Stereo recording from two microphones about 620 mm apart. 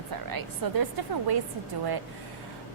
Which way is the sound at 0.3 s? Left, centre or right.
Right.